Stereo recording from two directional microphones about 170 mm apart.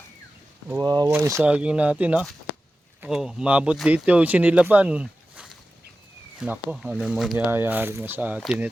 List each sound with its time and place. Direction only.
0.9 s speech: 20° right (ahead or behind); by 8.7 s 5° right (ahead or behind)